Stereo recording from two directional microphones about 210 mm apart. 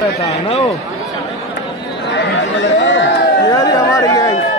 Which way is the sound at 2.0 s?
60° left (ahead or behind).